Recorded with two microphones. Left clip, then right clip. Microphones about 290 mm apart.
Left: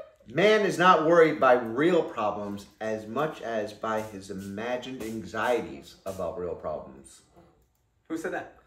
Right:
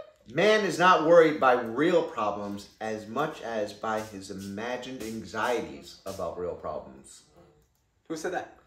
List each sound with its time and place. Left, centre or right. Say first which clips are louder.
0.3 s a man's voice: left 1 dB; centre
8.1 s speech: even; centre